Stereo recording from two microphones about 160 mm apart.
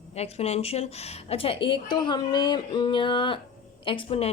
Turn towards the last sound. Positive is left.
turn(degrees=35)  # may be behind; listen again after turning